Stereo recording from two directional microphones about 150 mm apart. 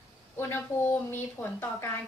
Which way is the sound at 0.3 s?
15° left (ahead or behind).